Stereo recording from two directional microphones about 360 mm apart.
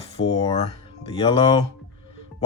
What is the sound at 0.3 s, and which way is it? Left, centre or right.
Speech, centre.